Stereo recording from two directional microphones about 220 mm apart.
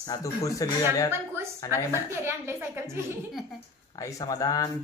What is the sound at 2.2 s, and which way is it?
Speech, 10° right (ahead or behind).